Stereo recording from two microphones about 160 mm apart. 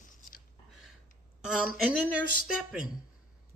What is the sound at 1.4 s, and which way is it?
A woman's voice, 5° right (ahead or behind).